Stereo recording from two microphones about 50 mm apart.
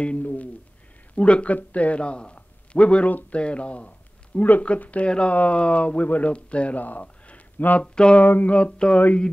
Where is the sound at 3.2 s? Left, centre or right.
Left.